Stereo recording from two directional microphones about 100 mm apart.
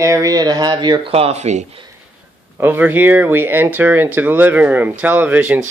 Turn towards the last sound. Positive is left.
turn(degrees=-15)  # may be behind; listen again after turning